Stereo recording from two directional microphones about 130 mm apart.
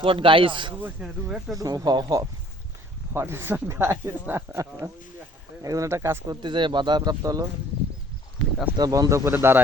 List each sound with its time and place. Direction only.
0.0 s a man's voice: 45° right (ahead or behind)
0.8 s speech: 10° right (ahead or behind)
1.5 s speech: 30° right (ahead or behind)
3.1 s speech: 20° right (ahead or behind)
6.4 s speech: 35° right (ahead or behind)
8.7 s speech: 30° right (ahead or behind)